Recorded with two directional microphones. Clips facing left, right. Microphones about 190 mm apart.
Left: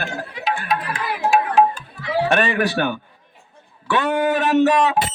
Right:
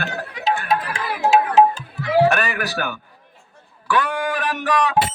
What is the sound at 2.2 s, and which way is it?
Speech, 30° left (ahead or behind).